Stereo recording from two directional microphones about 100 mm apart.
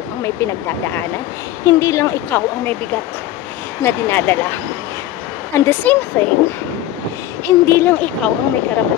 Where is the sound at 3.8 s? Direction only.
20° left (ahead or behind).